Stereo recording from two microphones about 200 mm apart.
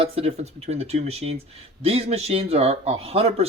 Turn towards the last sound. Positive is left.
turn(degrees=-30)  # may be behind; listen again after turning